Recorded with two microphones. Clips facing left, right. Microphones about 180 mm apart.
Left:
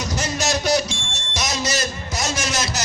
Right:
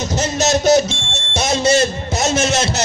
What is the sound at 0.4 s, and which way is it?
Music, 25° right (ahead or behind).